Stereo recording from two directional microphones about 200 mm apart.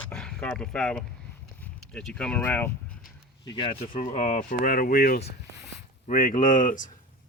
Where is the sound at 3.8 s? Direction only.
40° left (ahead or behind).